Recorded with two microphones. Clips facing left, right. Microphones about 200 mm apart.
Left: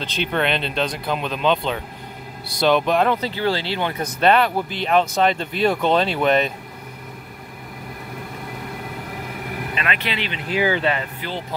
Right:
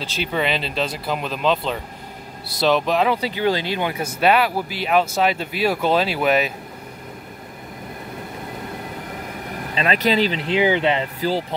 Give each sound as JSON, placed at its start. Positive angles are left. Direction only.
{"t": 0.0, "sound": "speech", "side_deg": -5}
{"t": 9.8, "sound": "speech", "side_deg": -40}
{"t": 11.1, "sound": "speech", "side_deg": -35}